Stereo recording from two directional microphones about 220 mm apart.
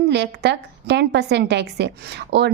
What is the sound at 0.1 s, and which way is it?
A woman's voice, 50° right (ahead or behind).